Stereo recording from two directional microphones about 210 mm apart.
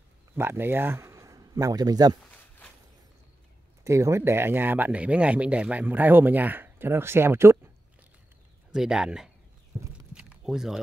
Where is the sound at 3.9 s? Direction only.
15° right (ahead or behind).